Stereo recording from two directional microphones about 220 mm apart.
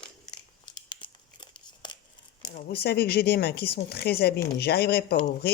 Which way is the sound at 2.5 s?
45° left (ahead or behind).